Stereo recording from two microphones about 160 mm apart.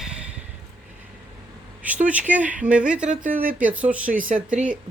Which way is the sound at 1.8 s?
10° right (ahead or behind).